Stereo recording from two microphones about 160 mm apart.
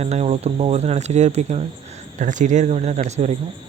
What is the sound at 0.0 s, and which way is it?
Speech, 45° right (ahead or behind).